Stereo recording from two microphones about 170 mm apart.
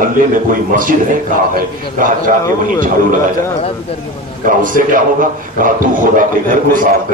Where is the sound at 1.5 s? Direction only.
55° right (ahead or behind).